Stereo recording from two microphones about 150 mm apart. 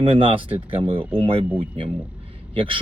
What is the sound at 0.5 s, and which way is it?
Speech, 35° right (ahead or behind).